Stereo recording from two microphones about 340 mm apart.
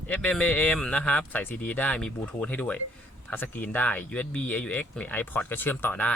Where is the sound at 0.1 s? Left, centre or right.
Centre.